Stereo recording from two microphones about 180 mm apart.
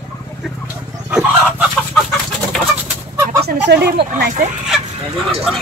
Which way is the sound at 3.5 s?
65° right (ahead or behind).